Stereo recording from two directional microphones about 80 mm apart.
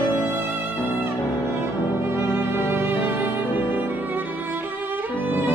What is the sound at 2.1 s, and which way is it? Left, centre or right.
Music, right.